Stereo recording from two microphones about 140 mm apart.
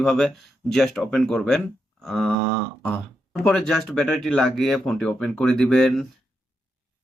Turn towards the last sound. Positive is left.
turn(degrees=5)  # may be behind; listen again after turning